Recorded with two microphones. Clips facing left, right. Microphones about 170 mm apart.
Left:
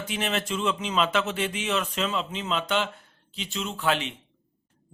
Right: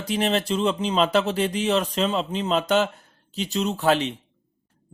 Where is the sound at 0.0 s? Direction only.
35° right (ahead or behind).